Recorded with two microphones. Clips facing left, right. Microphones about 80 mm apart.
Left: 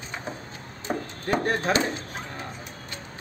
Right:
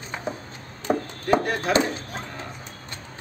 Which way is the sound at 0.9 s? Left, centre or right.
Centre.